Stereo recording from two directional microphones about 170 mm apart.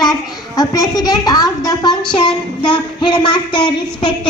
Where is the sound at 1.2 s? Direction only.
20° left (ahead or behind).